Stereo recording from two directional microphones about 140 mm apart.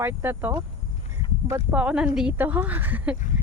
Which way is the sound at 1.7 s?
10° right (ahead or behind).